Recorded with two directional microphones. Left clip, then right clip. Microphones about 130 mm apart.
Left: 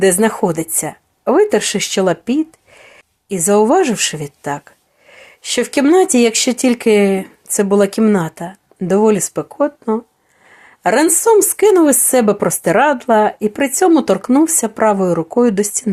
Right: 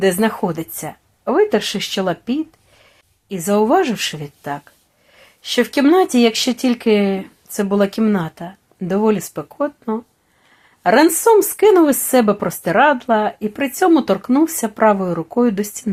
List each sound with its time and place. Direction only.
0.0 s a woman's voice: 45° left (ahead or behind)